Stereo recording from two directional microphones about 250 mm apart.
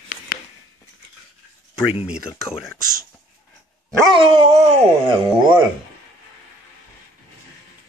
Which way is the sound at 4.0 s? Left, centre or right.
Centre.